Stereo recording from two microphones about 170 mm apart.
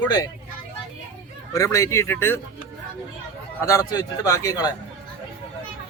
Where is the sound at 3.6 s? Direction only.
20° left (ahead or behind).